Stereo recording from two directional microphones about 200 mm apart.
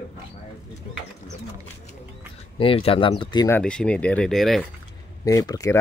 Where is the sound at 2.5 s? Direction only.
25° left (ahead or behind).